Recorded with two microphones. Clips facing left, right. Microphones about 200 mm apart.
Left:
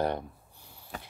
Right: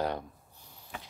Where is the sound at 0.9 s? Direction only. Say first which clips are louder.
Left 2 dB; 40° left (ahead or behind).